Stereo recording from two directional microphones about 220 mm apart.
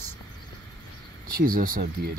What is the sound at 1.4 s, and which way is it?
Speech, 40° right (ahead or behind).